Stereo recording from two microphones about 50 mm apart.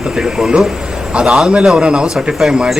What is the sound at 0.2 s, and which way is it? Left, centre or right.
A man's voice, centre.